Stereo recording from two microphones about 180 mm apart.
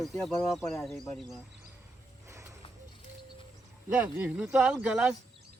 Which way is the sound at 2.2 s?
15° right (ahead or behind).